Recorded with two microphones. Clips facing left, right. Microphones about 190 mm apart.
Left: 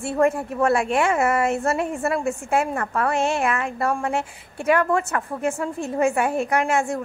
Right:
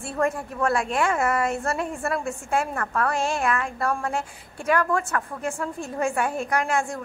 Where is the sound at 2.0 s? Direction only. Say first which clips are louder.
Left 4 dB; 5° left (ahead or behind).